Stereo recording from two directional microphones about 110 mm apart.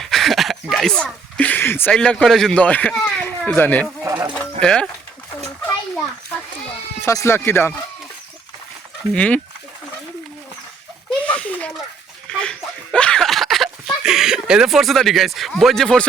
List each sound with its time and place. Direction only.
0.0 s a sound: centre (ahead or behind); by 1.9 s 20° left (ahead or behind)
1.9 s speech: 10° left (ahead or behind)
4.0 s speech: 30° right (ahead or behind)
4.4 s music: 5° left (ahead or behind)
6.3 s goat: 15° left (ahead or behind)
7.0 s speech: 25° left (ahead or behind)
9.1 s speech: 10° left (ahead or behind)
11.3 s a sound: 10° left (ahead or behind)